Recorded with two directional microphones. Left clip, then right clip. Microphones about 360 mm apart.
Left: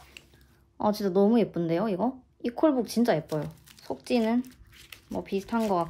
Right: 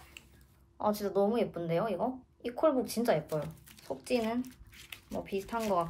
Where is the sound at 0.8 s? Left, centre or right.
Left.